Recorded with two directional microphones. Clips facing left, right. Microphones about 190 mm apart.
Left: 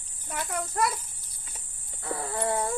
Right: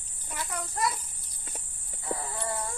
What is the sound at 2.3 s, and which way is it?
Speech, 60° left (ahead or behind).